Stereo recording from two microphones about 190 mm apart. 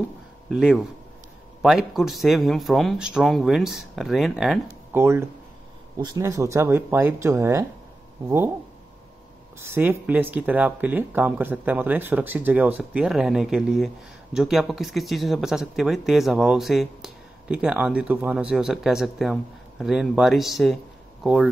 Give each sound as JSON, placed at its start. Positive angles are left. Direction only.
{"t": 0.5, "sound": "speech", "side_deg": 0}
{"t": 4.9, "sound": "speech", "side_deg": -10}
{"t": 9.6, "sound": "speech", "side_deg": -10}